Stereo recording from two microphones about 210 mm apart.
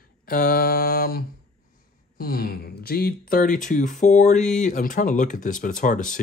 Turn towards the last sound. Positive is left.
turn(degrees=40)  # may be behind; listen again after turning